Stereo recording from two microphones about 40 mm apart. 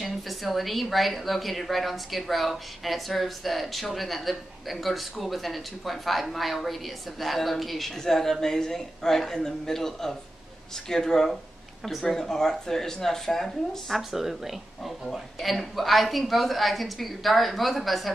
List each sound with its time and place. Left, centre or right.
0.0 s a woman's voice: centre
13.9 s speech: centre